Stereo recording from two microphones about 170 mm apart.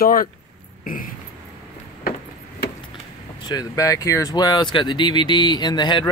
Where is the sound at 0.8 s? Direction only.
55° left (ahead or behind).